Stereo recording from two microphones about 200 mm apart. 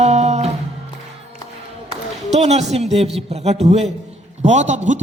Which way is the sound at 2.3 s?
35° right (ahead or behind).